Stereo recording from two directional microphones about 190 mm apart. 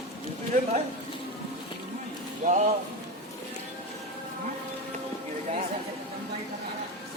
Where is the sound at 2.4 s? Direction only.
45° right (ahead or behind).